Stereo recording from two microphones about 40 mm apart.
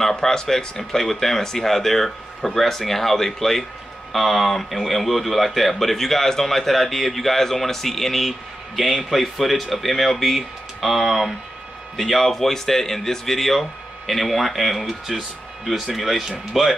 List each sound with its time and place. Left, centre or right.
0.1 s a man's voice: centre